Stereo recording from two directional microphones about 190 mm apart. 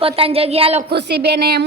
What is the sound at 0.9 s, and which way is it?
Speech, 60° right (ahead or behind).